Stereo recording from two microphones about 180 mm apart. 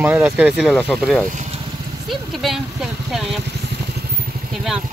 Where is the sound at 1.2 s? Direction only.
45° right (ahead or behind).